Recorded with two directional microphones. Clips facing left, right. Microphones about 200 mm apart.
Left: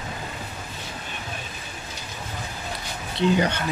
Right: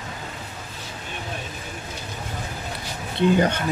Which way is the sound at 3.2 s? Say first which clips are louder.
Right 2 dB; 50° right (ahead or behind).